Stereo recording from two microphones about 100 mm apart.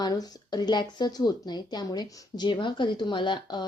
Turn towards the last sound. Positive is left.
turn(degrees=50)  # may be behind; listen again after turning